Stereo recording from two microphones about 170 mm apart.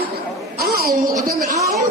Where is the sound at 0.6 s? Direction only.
60° right (ahead or behind).